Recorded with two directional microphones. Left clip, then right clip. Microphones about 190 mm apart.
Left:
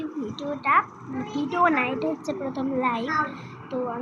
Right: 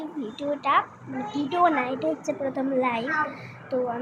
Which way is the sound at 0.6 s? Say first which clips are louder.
Left 2 dB; 20° right (ahead or behind).